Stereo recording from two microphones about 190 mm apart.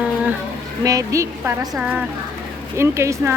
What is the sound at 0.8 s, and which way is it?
Speech, 15° right (ahead or behind).